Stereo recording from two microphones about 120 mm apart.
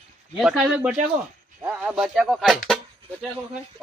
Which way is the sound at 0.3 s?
5° right (ahead or behind).